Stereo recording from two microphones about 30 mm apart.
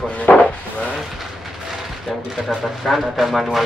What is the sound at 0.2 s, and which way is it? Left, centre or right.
Wood, left.